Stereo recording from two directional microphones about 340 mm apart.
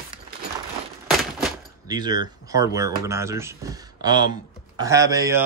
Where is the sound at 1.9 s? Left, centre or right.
Centre.